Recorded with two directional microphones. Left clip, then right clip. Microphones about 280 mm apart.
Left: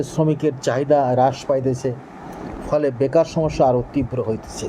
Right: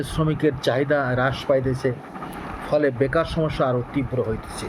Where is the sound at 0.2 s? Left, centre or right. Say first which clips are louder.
Left 2 dB; centre.